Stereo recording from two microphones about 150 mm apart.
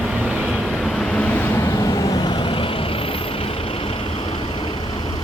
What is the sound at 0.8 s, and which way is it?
Vehicle, 5° left (ahead or behind).